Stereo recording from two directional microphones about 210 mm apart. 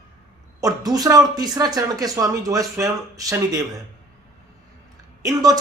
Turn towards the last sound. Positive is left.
turn(degrees=-15)  # may be behind; listen again after turning